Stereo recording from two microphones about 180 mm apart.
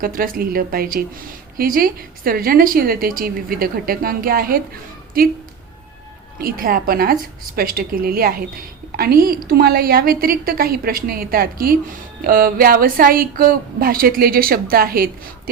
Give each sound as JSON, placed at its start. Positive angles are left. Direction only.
{"t": 0.0, "sound": "a woman's voice", "side_deg": -50}
{"t": 6.4, "sound": "a woman's voice", "side_deg": -55}